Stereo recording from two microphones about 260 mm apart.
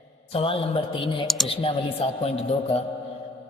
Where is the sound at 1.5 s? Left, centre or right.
Left.